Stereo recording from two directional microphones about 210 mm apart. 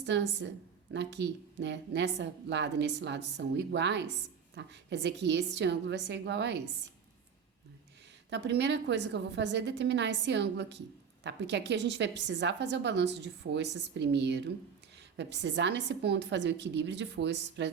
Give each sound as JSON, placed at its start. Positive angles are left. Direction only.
{"t": 0.0, "sound": "a woman's voice", "side_deg": -55}
{"t": 8.3, "sound": "a woman's voice", "side_deg": -55}